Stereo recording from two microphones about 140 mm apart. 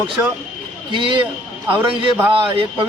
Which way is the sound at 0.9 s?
35° right (ahead or behind).